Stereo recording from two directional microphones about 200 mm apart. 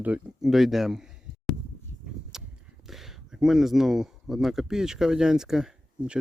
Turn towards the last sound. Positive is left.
turn(degrees=-5)  # may be behind; listen again after turning